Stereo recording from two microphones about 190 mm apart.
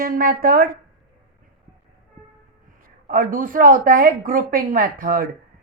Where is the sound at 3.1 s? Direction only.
45° right (ahead or behind).